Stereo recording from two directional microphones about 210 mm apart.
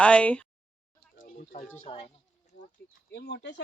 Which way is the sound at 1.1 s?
35° left (ahead or behind).